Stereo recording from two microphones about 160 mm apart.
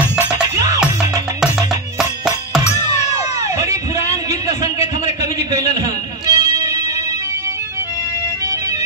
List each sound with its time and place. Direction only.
0.6 s music: 20° right (ahead or behind)
2.0 s music: centre (ahead or behind)
3.5 s a sound: 20° right (ahead or behind)